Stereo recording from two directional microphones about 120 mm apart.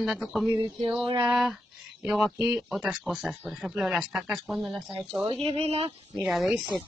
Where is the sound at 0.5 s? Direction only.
40° right (ahead or behind).